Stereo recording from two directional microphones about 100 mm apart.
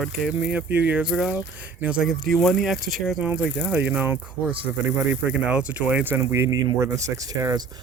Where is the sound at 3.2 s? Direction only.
15° right (ahead or behind).